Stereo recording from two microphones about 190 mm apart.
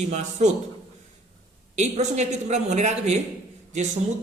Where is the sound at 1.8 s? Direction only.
35° right (ahead or behind).